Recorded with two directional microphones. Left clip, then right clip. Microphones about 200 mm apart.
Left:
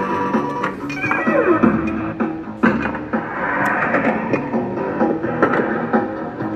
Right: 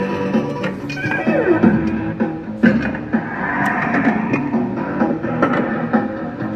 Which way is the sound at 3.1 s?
35° left (ahead or behind).